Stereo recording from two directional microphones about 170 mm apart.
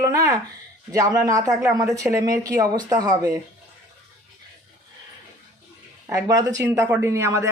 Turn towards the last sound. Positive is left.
turn(degrees=-15)  # may be behind; listen again after turning